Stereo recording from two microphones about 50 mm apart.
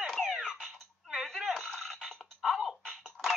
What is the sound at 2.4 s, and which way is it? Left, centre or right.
Music, centre.